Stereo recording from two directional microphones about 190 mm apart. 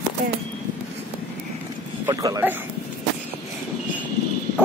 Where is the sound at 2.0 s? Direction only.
20° right (ahead or behind).